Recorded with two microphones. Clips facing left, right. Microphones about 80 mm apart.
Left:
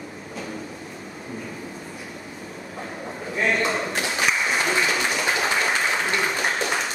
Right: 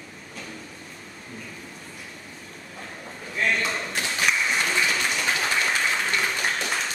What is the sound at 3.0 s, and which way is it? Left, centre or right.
Applause, left.